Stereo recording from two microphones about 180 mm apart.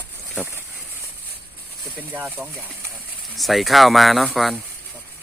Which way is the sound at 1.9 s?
10° right (ahead or behind).